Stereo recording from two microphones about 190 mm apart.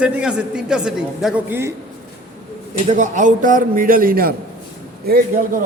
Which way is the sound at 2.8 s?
40° right (ahead or behind).